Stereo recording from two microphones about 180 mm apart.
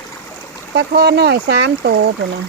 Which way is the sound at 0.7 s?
65° right (ahead or behind).